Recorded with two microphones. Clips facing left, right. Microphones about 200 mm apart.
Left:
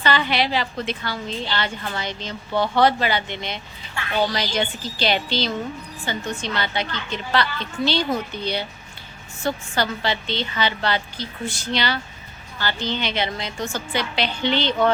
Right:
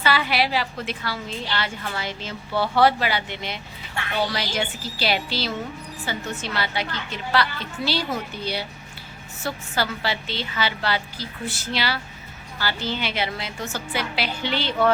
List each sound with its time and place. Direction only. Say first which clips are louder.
0.0 s a woman's voice: left 1 dB; 5° right (ahead or behind)